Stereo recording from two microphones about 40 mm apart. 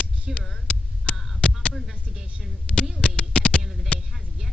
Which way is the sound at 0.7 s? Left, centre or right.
Left.